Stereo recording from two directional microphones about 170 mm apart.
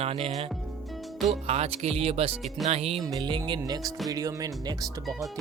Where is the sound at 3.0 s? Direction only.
25° right (ahead or behind).